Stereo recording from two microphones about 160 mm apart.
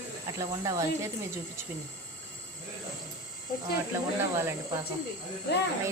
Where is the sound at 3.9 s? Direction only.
15° right (ahead or behind).